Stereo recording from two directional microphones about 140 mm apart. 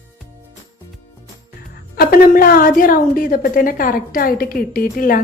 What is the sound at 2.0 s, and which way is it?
A woman's voice, 90° left.